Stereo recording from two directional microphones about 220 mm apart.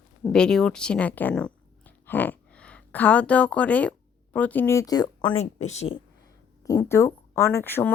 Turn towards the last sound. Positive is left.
turn(degrees=10)  # may be behind; listen again after turning